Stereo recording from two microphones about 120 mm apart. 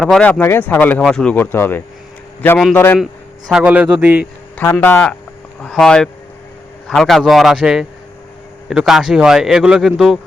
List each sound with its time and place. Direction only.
0.0 s speech: 5° left (ahead or behind)
3.5 s a man's voice: 10° right (ahead or behind)
4.5 s speech: 15° left (ahead or behind)
5.6 s speech: 5° left (ahead or behind)